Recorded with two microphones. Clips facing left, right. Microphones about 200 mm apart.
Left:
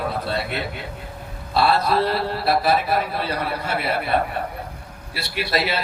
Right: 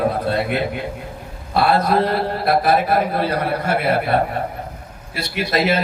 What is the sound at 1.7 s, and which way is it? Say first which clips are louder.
A man's voice: right 3 dB; 50° right (ahead or behind).